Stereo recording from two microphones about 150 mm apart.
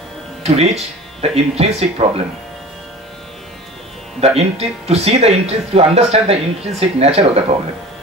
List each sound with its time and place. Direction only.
0.4 s speech: 45° right (ahead or behind)
4.4 s speech: 45° right (ahead or behind)